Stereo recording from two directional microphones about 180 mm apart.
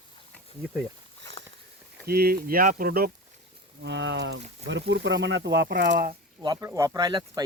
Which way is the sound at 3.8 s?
80° right.